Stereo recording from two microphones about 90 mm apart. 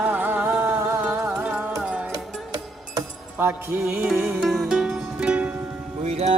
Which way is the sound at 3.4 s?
25° right (ahead or behind).